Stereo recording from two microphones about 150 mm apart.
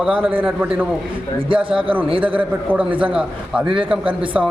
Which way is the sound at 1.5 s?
35° right (ahead or behind).